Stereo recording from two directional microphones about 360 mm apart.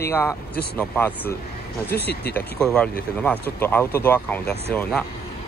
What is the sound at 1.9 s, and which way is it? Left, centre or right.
Speech, left.